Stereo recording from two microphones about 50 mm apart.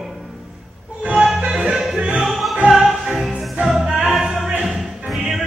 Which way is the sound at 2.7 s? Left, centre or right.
Centre.